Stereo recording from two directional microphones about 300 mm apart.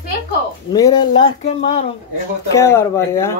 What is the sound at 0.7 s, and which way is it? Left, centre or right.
Speech, centre.